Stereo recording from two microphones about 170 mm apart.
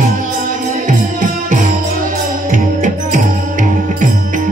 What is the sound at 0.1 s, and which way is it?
Music, 50° right (ahead or behind).